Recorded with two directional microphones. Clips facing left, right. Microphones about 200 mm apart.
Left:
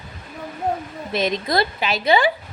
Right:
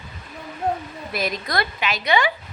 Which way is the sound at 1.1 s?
25° left (ahead or behind).